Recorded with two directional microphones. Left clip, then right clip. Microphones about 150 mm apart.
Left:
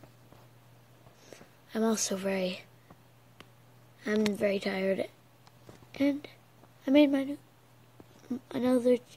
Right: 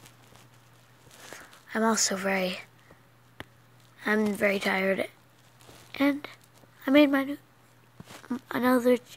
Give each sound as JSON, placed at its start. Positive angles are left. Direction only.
{"t": 1.3, "sound": "speech", "side_deg": 20}
{"t": 4.4, "sound": "speech", "side_deg": 15}